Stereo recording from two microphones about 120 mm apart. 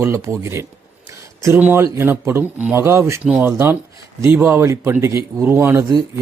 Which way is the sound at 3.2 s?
10° right (ahead or behind).